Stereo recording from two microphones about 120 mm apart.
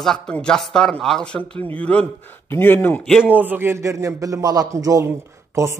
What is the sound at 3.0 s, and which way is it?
Speech, 5° left (ahead or behind).